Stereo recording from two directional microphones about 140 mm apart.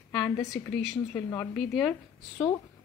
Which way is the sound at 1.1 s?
20° left (ahead or behind).